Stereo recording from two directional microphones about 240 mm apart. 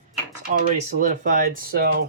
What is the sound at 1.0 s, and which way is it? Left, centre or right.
Speech, right.